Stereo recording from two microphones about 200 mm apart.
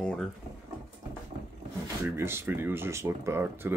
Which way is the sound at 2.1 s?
10° right (ahead or behind).